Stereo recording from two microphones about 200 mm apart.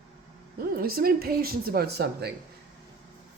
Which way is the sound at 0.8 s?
50° right (ahead or behind).